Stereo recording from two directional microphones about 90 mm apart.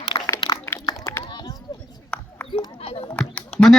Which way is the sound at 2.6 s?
80° left.